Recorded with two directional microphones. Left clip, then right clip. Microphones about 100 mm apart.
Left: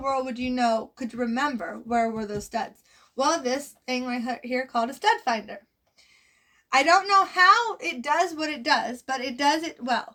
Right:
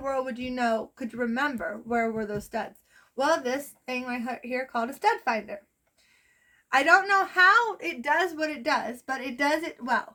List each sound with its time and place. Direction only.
0.0 s a woman's voice: 35° right (ahead or behind)
6.7 s a woman's voice: 35° right (ahead or behind)